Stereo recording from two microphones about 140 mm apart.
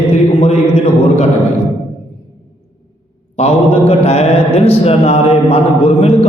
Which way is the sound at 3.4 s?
45° left (ahead or behind).